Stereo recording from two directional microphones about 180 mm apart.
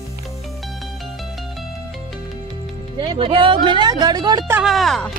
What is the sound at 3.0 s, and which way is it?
A woman's voice, 25° right (ahead or behind).